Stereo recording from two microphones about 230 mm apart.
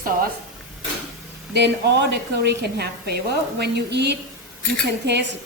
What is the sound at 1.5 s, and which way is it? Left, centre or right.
A woman's voice, right.